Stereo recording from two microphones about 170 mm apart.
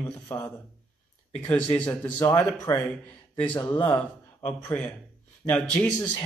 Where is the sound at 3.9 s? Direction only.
10° left (ahead or behind).